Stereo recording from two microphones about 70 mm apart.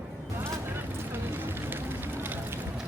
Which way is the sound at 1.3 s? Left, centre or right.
Right.